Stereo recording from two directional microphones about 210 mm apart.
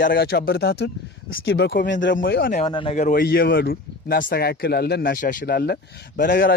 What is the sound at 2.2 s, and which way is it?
Speech, 45° left (ahead or behind).